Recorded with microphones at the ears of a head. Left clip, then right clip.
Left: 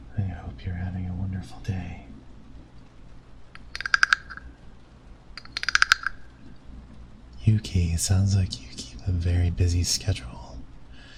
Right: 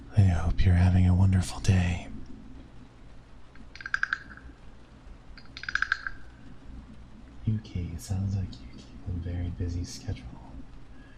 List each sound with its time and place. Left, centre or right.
0.1 s music: right
3.5 s a sound: left
5.3 s computer keyboard: left
7.4 s speech: left